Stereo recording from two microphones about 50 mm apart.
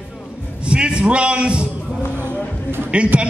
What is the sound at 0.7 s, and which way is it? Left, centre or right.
A man's voice, right.